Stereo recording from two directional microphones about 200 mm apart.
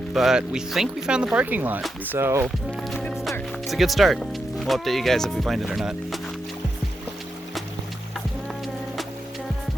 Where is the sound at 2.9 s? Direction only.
Centre (ahead or behind).